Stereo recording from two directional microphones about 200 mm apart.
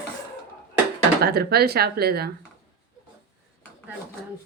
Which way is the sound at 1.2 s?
50° right (ahead or behind).